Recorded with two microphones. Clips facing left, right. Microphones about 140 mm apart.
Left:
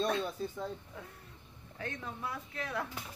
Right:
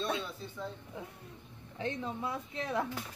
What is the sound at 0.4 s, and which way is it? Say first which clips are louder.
Speech: left 7 dB; 45° left (ahead or behind).